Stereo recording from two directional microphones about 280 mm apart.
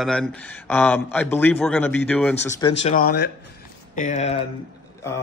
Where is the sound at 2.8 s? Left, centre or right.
Left.